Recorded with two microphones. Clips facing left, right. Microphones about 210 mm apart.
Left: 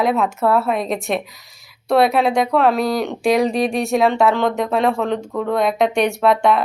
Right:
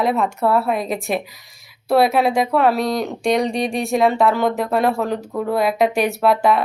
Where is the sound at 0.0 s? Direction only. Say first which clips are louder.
Left 1 dB; centre (ahead or behind).